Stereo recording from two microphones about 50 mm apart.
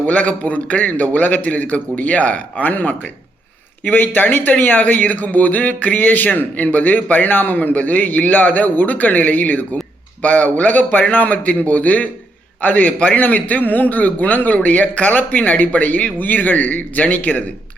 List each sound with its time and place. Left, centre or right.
0.1 s a man's voice: left